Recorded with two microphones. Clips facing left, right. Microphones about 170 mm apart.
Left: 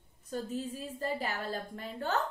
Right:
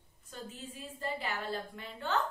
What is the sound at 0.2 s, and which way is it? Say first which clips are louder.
A woman's voice: left 10 dB; 40° left (ahead or behind).